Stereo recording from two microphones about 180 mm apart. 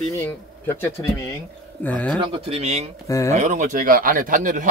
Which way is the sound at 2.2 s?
30° right (ahead or behind).